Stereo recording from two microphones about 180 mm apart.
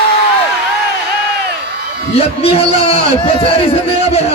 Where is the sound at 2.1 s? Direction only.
35° left (ahead or behind).